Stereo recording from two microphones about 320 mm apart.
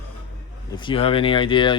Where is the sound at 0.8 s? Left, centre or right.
Centre.